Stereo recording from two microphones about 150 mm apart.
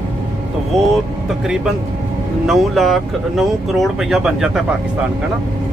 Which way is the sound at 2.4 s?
Centre (ahead or behind).